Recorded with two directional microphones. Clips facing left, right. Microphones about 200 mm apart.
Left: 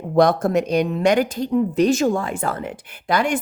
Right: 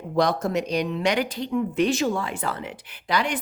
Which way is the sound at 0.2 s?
55° left (ahead or behind).